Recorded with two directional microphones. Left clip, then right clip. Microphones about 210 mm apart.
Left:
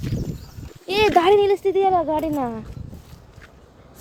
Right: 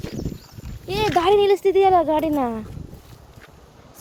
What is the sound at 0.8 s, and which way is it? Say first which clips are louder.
Speech: left 4 dB; 50° left (ahead or behind).